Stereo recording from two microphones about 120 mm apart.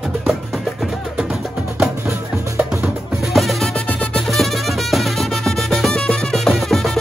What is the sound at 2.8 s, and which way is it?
Music, centre (ahead or behind).